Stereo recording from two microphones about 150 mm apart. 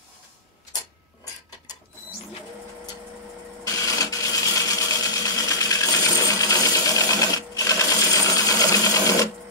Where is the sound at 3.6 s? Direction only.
20° left (ahead or behind).